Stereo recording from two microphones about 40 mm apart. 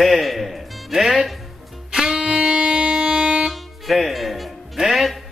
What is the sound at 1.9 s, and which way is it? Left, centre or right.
Music, centre.